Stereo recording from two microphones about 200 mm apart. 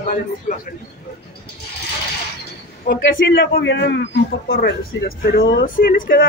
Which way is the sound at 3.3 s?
55° left (ahead or behind).